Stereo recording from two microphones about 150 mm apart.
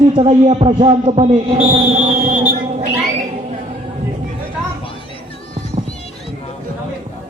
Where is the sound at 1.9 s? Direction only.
70° right (ahead or behind).